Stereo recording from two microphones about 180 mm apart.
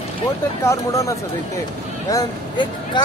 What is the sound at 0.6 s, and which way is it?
Speech, 15° left (ahead or behind).